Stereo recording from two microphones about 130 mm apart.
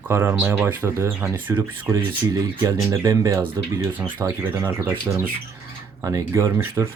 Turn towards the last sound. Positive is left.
turn(degrees=-20)  # may be behind; listen again after turning